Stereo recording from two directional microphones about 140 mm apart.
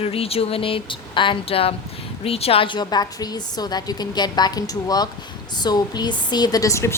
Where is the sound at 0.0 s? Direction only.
45° left (ahead or behind).